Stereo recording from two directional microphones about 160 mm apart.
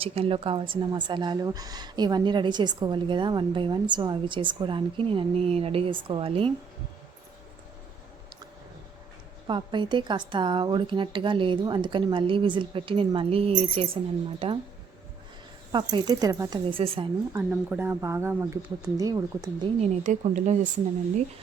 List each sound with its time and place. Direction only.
0.0 s a woman's voice: 35° right (ahead or behind)
9.5 s a woman's voice: 30° right (ahead or behind)
15.7 s a woman's voice: 25° right (ahead or behind)
16.6 s a woman's voice: 35° right (ahead or behind)
17.5 s speech: 10° right (ahead or behind)
19.8 s speech: 45° right (ahead or behind)